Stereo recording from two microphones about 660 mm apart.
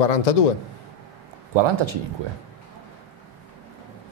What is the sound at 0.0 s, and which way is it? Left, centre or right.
Speech, left.